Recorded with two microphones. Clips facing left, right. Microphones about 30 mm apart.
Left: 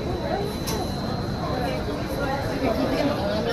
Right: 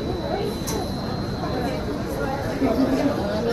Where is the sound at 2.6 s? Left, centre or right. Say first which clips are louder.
Right 4 dB; centre.